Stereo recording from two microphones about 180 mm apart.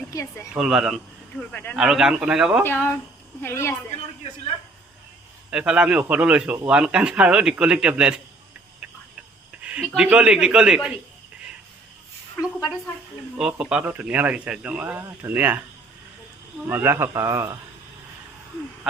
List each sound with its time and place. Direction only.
0.1 s speech: 15° left (ahead or behind)
0.5 s a man's voice: centre (ahead or behind)
1.4 s speech: 10° left (ahead or behind)
1.8 s a man's voice: 5° right (ahead or behind)
2.6 s speech: 10° left (ahead or behind)
5.5 s a man's voice: 5° right (ahead or behind)
9.5 s speech: 5° right (ahead or behind)
13.4 s speech: 5° right (ahead or behind)
16.6 s speech: 15° right (ahead or behind)